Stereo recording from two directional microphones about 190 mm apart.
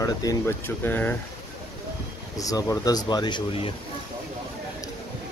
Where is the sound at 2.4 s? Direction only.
20° left (ahead or behind).